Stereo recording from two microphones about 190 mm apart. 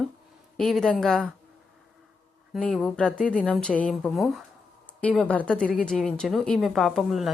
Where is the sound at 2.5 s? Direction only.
Centre (ahead or behind).